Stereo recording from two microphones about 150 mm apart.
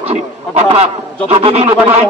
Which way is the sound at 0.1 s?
45° right (ahead or behind).